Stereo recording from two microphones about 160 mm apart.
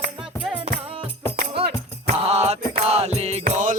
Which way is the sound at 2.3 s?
40° right (ahead or behind).